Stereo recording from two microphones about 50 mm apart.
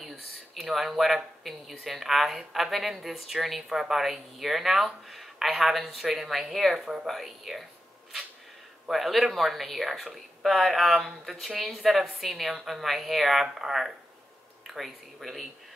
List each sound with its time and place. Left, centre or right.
0.6 s speech: centre
3.6 s speech: centre
3.9 s speech: centre
8.9 s speech: centre